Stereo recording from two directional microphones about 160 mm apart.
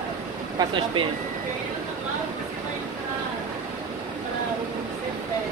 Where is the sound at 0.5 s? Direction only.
30° right (ahead or behind).